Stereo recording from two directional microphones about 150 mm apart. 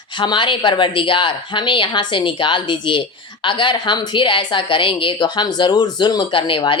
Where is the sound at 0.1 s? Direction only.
30° left (ahead or behind).